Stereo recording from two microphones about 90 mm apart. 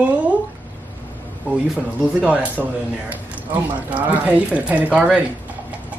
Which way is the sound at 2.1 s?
15° right (ahead or behind).